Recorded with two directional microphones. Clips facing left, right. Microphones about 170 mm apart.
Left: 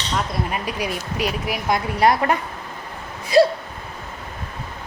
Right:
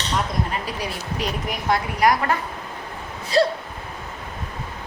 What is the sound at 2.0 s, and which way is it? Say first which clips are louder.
Speech: left 2 dB; 30° left (ahead or behind).